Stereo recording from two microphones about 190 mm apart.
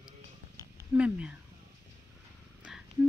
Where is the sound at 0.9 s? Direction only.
5° right (ahead or behind).